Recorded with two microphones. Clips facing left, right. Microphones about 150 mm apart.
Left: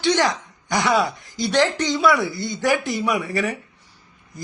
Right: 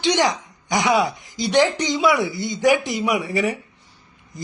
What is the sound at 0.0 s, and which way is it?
Speech, 20° right (ahead or behind).